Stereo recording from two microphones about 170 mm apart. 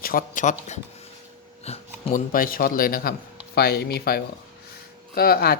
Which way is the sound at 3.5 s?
70° left (ahead or behind).